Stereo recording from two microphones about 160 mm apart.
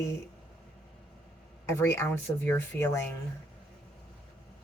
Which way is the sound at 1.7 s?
15° left (ahead or behind).